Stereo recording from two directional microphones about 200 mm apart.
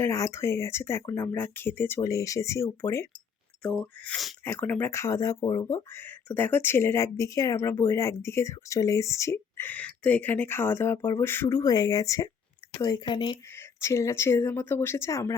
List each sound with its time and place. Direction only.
0.0 s speech: 15° left (ahead or behind)